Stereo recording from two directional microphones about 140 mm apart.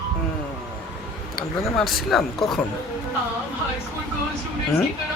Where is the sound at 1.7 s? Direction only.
Centre (ahead or behind).